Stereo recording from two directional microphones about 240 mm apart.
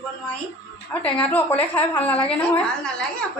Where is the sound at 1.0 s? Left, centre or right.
Centre.